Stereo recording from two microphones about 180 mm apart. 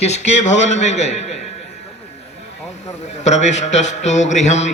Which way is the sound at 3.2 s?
40° left (ahead or behind).